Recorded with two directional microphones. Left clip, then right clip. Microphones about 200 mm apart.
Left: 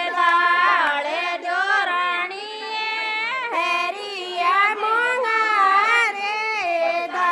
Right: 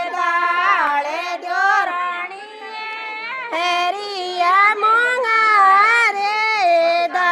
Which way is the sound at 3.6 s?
35° right (ahead or behind).